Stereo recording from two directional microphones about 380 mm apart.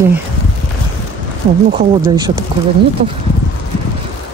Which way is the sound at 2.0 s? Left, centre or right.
Centre.